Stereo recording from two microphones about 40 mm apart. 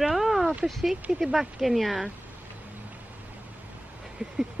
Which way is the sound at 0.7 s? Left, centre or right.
Centre.